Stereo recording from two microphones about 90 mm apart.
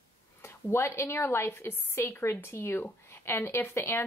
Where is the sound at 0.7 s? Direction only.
30° left (ahead or behind).